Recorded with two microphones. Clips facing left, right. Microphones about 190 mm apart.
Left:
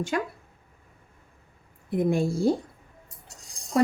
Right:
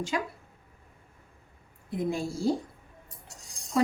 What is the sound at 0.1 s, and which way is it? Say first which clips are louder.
Speech: left 3 dB; 55° left (ahead or behind).